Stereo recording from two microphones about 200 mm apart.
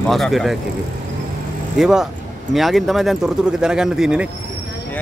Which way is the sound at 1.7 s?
Centre (ahead or behind).